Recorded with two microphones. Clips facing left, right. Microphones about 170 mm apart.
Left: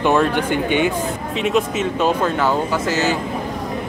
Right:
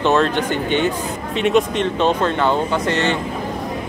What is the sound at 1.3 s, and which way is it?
Speech, centre (ahead or behind).